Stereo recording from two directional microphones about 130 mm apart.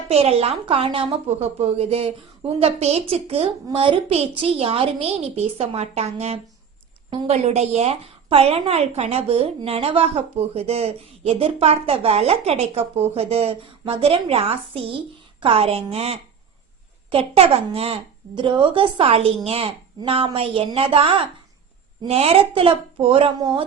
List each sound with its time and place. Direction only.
0.1 s a woman's voice: 50° right (ahead or behind)